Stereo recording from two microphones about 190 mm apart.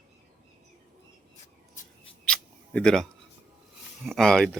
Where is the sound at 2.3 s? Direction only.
5° left (ahead or behind).